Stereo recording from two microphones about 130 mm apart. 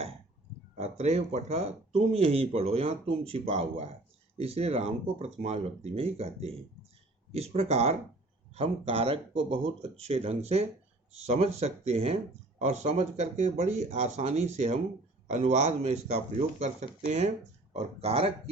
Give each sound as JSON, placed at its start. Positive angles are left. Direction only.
{"t": 0.8, "sound": "speech", "side_deg": -55}
{"t": 17.7, "sound": "speech", "side_deg": -50}